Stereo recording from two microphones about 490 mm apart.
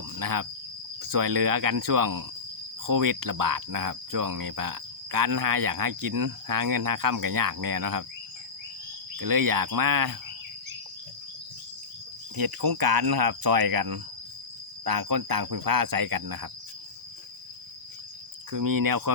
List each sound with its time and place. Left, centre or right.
0.2 s speech: right
1.0 s cricket: right
9.1 s cricket: right
12.4 s speech: right
18.5 s cricket: right